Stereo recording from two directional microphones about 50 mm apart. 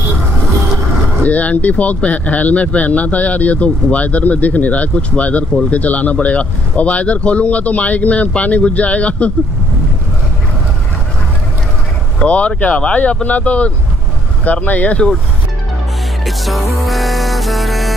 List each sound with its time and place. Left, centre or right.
1.2 s speech: left
12.2 s speech: left
16.3 s music: centre